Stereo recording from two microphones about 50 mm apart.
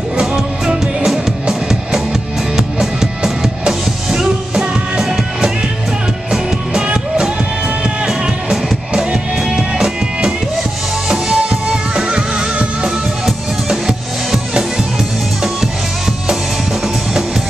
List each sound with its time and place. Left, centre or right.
0.2 s music: centre
6.3 s music: centre